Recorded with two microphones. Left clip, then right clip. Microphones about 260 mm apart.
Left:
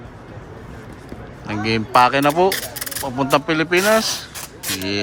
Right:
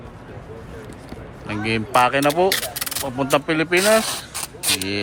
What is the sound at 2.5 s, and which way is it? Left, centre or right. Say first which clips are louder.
Mechanisms: right 1 dB; centre.